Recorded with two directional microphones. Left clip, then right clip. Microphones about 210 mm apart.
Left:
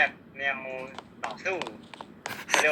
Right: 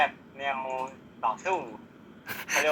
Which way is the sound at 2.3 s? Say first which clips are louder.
Left 2 dB; centre (ahead or behind).